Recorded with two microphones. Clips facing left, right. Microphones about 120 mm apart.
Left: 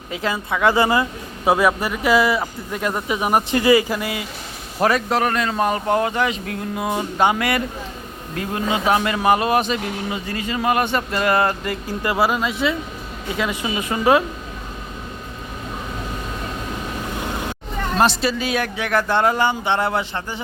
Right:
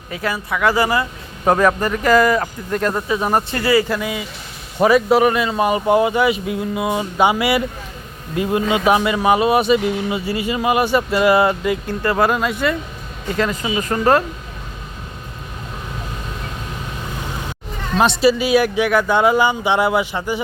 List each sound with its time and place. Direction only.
0.1 s speech: 25° left (ahead or behind)
1.5 s speech: 5° left (ahead or behind)
3.9 s a man's voice: centre (ahead or behind)
8.7 s speech: 10° right (ahead or behind)
17.9 s speech: centre (ahead or behind)